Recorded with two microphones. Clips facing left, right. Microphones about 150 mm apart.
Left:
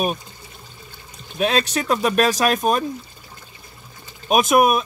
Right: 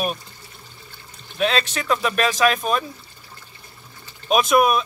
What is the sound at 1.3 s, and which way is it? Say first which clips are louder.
Speech: left 2 dB; 45° left (ahead or behind).